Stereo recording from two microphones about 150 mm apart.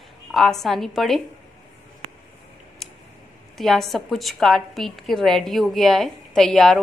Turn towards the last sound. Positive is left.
turn(degrees=5)  # may be behind; listen again after turning